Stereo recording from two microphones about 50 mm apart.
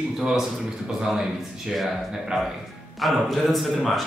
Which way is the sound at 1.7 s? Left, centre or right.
Centre.